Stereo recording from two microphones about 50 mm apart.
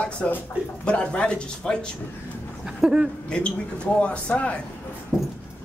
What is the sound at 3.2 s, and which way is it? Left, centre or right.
Speech, centre.